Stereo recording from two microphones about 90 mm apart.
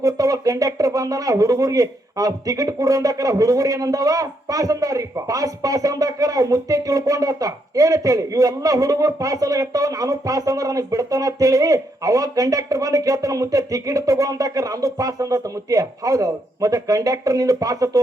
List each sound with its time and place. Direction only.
0.0 s speech: 40° right (ahead or behind)